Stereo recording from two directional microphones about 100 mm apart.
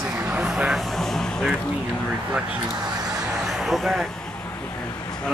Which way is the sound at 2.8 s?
40° right (ahead or behind).